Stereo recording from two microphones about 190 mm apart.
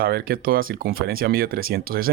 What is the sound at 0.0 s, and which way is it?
Speech, 50° right (ahead or behind).